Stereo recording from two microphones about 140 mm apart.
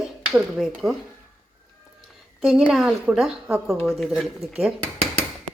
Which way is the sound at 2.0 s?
Centre (ahead or behind).